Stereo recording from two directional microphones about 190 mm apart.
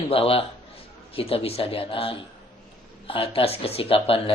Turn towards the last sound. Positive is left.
turn(degrees=30)  # may be behind; listen again after turning